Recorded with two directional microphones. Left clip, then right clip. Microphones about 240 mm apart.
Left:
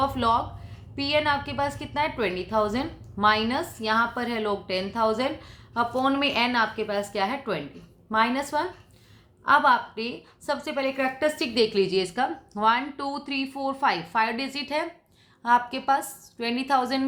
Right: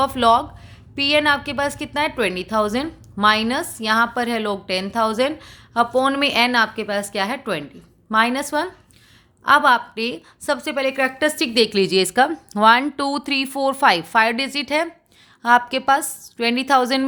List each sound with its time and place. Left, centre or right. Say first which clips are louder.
0.0 s a woman's voice: right 7 dB; right